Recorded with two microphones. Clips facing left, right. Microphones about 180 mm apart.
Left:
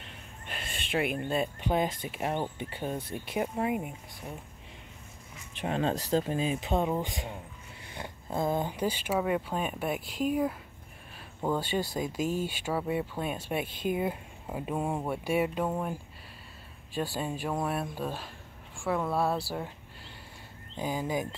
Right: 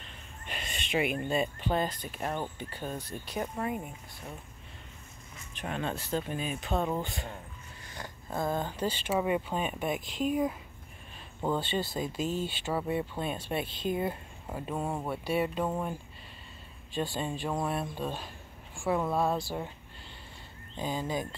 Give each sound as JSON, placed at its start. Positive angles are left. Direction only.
{"t": 0.5, "sound": "a sound", "side_deg": 0}
{"t": 1.6, "sound": "speech", "side_deg": 10}
{"t": 5.6, "sound": "speech", "side_deg": 30}
{"t": 6.5, "sound": "speech", "side_deg": 20}
{"t": 7.9, "sound": "speech", "side_deg": 20}
{"t": 17.1, "sound": "speech", "side_deg": 5}
{"t": 20.7, "sound": "speech", "side_deg": 10}